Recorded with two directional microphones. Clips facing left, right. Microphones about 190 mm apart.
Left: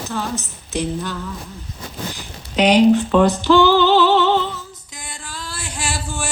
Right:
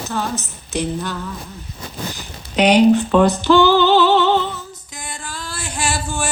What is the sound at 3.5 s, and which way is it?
Female singing, 45° right (ahead or behind).